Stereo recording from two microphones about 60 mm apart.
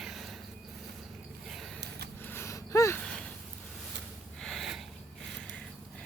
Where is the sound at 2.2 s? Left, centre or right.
Left.